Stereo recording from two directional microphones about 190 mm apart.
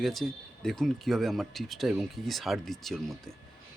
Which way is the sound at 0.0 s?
Centre (ahead or behind).